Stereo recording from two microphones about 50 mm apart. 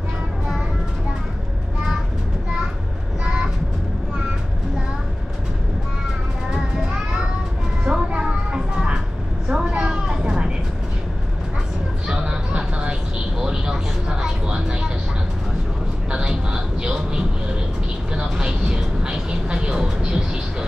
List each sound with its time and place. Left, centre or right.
7.8 s music: centre
9.5 s a sound: centre
12.1 s vehicle: centre
16.1 s vehicle: centre